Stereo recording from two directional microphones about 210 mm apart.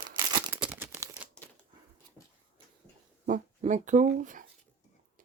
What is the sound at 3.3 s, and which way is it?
Speech, 35° right (ahead or behind).